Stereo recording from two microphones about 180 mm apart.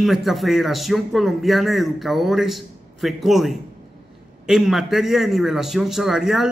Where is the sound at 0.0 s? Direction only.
Centre (ahead or behind).